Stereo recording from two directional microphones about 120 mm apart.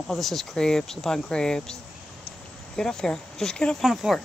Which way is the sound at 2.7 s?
5° left (ahead or behind).